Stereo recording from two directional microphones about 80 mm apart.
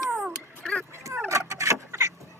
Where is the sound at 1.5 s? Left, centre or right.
Right.